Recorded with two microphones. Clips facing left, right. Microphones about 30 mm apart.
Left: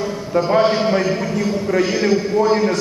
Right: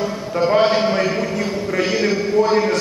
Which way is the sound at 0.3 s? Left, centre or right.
Centre.